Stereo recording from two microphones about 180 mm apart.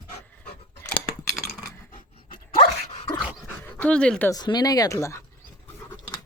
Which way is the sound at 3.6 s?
5° left (ahead or behind).